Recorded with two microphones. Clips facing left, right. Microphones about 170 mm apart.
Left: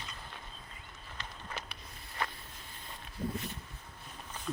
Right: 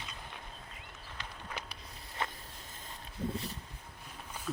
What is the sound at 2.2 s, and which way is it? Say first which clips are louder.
Boat: even; 20° right (ahead or behind).